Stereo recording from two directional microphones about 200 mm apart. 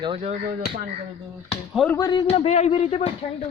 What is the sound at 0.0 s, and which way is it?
Speech, 30° right (ahead or behind).